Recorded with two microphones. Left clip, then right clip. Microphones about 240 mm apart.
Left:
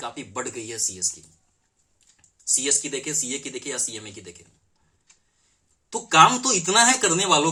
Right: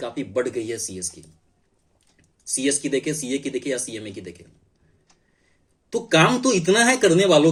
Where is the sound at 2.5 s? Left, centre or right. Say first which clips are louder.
Right 2 dB; centre.